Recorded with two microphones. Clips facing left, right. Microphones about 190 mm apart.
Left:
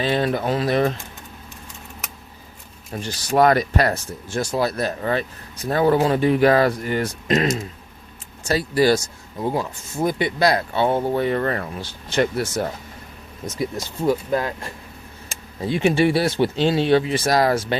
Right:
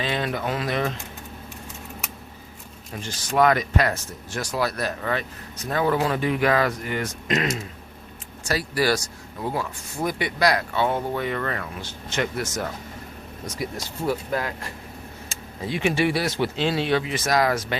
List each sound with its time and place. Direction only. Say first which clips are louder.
0.0 s speech: left 5 dB; 35° left (ahead or behind)
2.9 s speech: left 4 dB; 35° left (ahead or behind)
8.4 s speech: left 5 dB; 25° left (ahead or behind)
14.1 s speech: left 5 dB; 25° left (ahead or behind)
15.6 s speech: left 5 dB; 30° left (ahead or behind)